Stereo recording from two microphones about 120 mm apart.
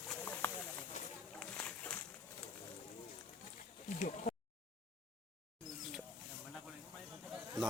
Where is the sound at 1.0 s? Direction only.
75° left (ahead or behind).